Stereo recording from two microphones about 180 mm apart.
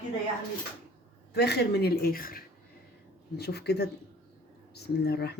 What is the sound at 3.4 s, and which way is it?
Speech, 65° left (ahead or behind).